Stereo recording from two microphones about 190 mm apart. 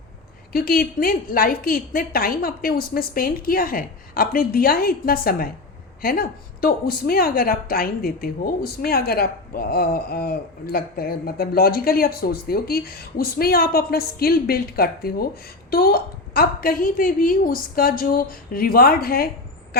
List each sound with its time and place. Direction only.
0.5 s a woman's voice: 50° left (ahead or behind)